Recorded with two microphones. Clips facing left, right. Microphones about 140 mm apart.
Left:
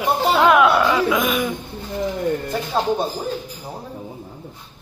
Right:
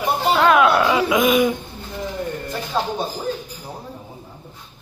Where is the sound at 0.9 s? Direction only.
10° right (ahead or behind).